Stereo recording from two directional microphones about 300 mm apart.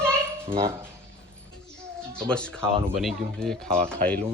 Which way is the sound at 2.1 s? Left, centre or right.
Centre.